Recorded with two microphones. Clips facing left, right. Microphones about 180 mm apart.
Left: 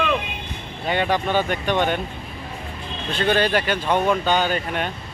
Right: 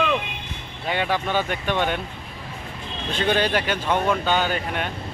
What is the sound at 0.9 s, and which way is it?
Speech, 5° right (ahead or behind).